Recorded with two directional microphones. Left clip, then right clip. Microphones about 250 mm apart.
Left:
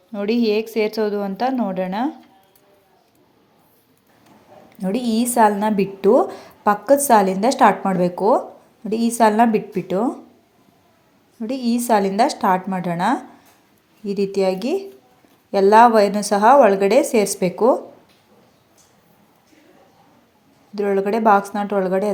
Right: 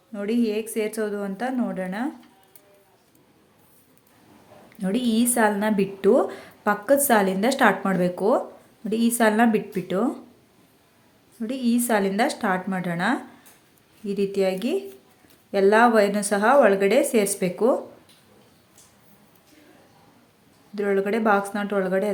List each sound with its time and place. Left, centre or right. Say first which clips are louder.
0.1 s a woman's voice: left 6 dB; centre
4.8 s a woman's voice: left 2 dB; centre
11.3 s a woman's voice: left 2 dB; centre
20.7 s a woman's voice: left 4 dB; centre